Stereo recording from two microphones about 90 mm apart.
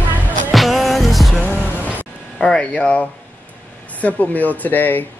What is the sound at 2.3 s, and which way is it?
Speech, 10° left (ahead or behind).